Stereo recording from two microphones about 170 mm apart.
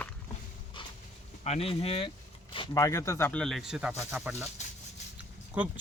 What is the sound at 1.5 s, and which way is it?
Speech, 35° left (ahead or behind).